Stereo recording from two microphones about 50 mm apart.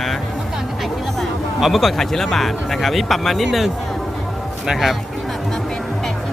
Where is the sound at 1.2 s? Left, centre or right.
Centre.